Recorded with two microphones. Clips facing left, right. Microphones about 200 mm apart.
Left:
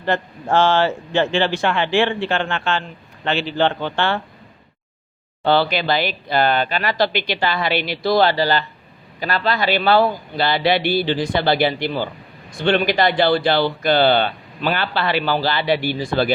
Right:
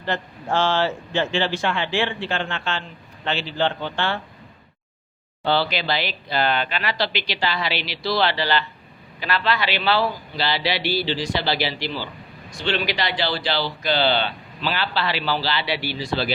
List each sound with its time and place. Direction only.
0.0 s speech: 55° left (ahead or behind)
5.4 s speech: 55° left (ahead or behind)